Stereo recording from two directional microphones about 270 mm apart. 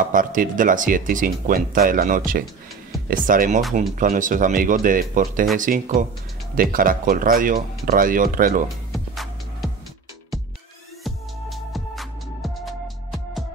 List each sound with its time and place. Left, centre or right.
0.0 s speech: right
8.9 s music: centre
11.1 s music: centre